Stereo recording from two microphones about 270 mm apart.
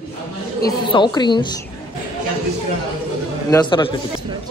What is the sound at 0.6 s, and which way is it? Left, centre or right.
Speech, centre.